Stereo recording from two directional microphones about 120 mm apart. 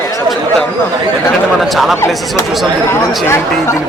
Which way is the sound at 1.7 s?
Centre (ahead or behind).